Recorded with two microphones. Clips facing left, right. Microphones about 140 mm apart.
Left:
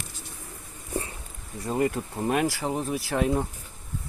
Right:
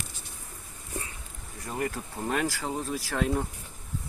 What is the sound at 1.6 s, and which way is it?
Speech, 25° left (ahead or behind).